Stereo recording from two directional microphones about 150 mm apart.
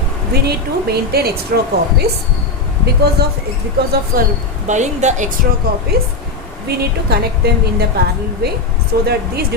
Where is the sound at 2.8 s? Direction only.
90° right.